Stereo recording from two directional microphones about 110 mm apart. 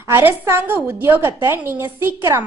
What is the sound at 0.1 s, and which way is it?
A woman's voice, 20° right (ahead or behind).